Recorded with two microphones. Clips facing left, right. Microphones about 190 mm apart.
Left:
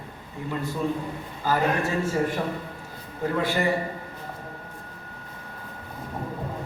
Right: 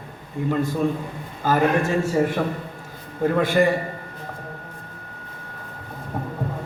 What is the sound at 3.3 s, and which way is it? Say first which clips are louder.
Speech: right 5 dB; 50° right (ahead or behind).